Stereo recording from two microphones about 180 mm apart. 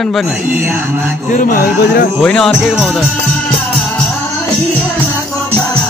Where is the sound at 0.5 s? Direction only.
10° right (ahead or behind).